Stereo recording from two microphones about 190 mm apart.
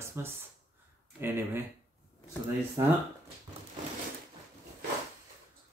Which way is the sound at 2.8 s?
20° right (ahead or behind).